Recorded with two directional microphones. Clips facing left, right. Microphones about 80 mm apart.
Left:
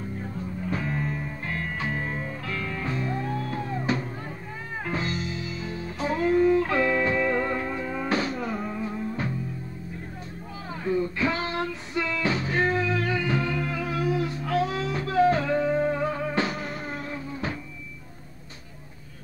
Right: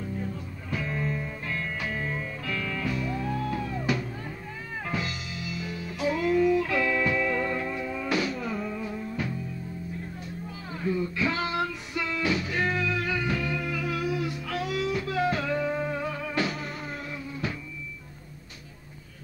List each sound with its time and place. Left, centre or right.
0.7 s music: left
10.7 s music: left